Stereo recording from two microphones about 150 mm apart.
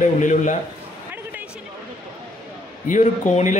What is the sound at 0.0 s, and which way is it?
Speech, 55° left (ahead or behind).